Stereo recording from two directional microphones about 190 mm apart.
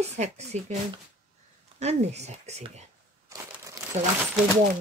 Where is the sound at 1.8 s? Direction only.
35° right (ahead or behind).